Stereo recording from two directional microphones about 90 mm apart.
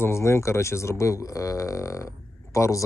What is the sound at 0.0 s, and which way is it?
Speech, 30° left (ahead or behind).